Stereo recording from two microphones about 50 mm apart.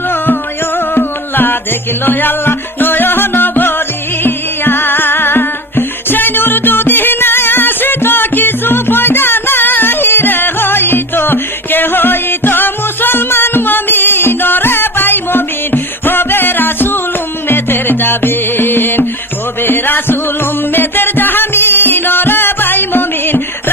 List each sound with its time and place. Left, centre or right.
0.9 s music: left